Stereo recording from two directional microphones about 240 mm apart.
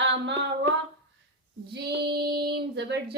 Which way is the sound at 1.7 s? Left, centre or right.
Right.